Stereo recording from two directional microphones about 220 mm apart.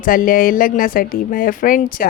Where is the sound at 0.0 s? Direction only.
40° left (ahead or behind).